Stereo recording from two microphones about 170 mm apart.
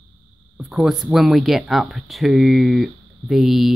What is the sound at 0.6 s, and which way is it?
Speech, centre (ahead or behind).